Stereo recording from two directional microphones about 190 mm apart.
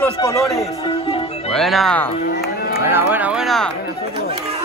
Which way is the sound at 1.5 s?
Centre (ahead or behind).